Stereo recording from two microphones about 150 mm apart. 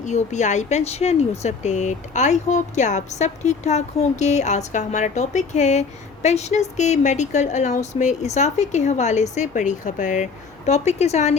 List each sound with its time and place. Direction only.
0.0 s speech: 50° left (ahead or behind)